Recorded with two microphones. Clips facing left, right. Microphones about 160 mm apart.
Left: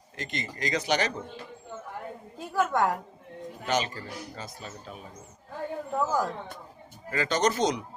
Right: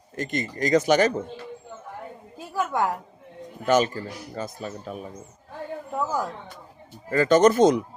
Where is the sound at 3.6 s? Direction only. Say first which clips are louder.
Right 8 dB; 50° right (ahead or behind).